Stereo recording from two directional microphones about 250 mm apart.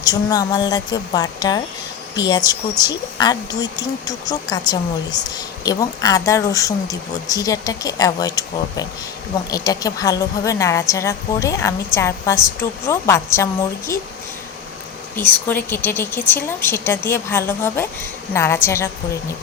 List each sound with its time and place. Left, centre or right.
0.0 s a woman's voice: centre
15.1 s a woman's voice: centre